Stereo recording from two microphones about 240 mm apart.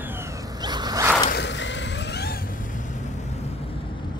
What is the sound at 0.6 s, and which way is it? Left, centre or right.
Zipper, centre.